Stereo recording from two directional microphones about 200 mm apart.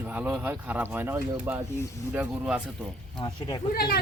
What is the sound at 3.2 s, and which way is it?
Speech, 25° left (ahead or behind).